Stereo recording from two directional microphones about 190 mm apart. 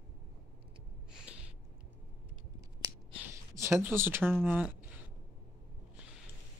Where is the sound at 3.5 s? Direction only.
10° right (ahead or behind).